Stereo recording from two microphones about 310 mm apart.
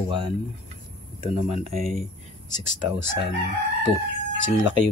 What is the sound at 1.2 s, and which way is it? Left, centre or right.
Speech, right.